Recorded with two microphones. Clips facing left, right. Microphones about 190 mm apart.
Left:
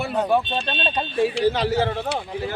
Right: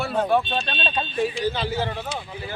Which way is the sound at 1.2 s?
70° left (ahead or behind).